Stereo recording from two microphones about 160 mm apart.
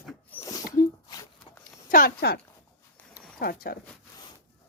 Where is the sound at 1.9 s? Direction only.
60° left (ahead or behind).